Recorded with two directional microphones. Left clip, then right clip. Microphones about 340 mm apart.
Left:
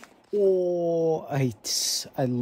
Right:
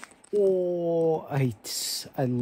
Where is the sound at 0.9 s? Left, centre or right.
Centre.